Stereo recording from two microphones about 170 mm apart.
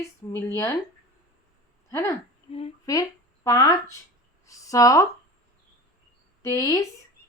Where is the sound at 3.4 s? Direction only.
20° left (ahead or behind).